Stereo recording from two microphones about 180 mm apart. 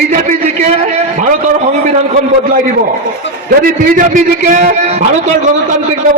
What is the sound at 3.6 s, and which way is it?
A man's voice, 45° right (ahead or behind).